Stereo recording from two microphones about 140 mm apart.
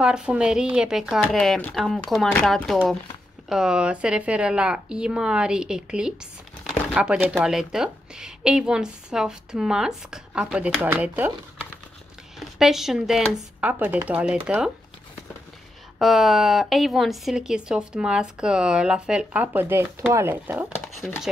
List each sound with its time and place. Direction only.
0.0 s speech: 5° right (ahead or behind)
12.4 s speech: centre (ahead or behind)
16.0 s speech: centre (ahead or behind)
21.0 s speech: 5° left (ahead or behind)